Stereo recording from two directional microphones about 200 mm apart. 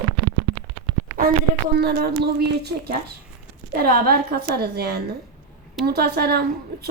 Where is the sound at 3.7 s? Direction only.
50° right (ahead or behind).